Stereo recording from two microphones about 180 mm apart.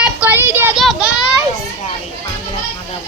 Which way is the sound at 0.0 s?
10° right (ahead or behind).